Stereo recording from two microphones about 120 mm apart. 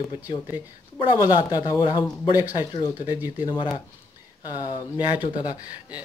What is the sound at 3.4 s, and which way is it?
Speech, 40° left (ahead or behind).